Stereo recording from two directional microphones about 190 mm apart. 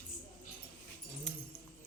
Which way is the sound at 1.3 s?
5° left (ahead or behind).